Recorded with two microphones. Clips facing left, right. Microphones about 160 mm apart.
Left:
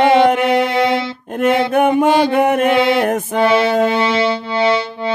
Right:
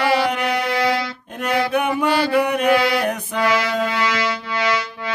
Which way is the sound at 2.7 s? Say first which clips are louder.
Left 4 dB; 25° left (ahead or behind).